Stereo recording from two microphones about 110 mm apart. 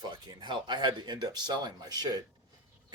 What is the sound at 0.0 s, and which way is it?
Speech, 40° right (ahead or behind).